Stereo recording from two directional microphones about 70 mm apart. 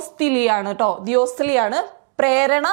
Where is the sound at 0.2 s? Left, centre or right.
Centre.